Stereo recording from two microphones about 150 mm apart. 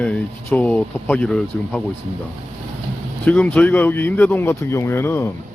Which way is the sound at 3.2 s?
10° left (ahead or behind).